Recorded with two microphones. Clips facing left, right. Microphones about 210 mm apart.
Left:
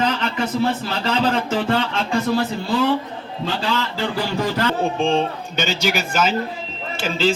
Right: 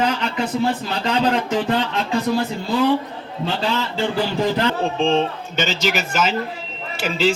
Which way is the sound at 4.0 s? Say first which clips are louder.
Right 2 dB; 20° right (ahead or behind).